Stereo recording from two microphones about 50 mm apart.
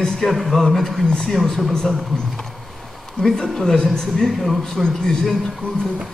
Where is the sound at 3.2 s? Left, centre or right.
Centre.